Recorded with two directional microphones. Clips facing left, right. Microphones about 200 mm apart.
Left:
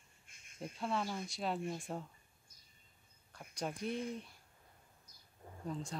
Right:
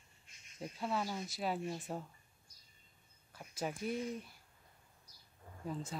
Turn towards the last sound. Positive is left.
turn(degrees=-5)  # may be behind; listen again after turning